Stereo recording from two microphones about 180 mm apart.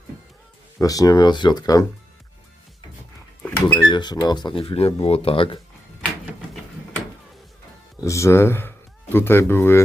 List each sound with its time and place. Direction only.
0.8 s speech: 20° left (ahead or behind)
3.4 s a sound: 10° left (ahead or behind)
3.8 s speech: 25° left (ahead or behind)
8.0 s speech: 15° left (ahead or behind)